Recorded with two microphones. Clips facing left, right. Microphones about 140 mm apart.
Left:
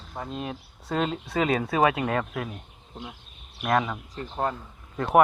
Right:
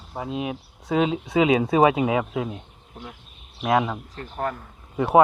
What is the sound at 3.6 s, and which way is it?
Speech, 5° right (ahead or behind).